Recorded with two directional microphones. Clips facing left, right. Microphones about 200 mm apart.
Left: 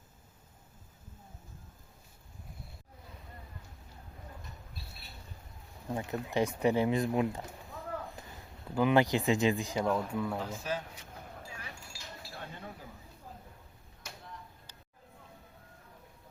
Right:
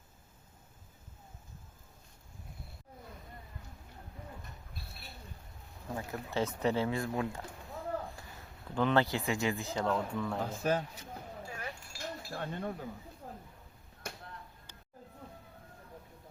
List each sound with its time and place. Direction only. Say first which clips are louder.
6.0 s speech: left 3 dB; 20° left (ahead or behind)
8.7 s speech: left 3 dB; 10° left (ahead or behind)
10.4 s speech: right 5 dB; 55° right (ahead or behind)
11.4 s keys jangling: right 4 dB; 55° right (ahead or behind)
13.2 s a sound: right 3 dB; 60° right (ahead or behind)
14.0 s chop: right 5 dB; 55° right (ahead or behind)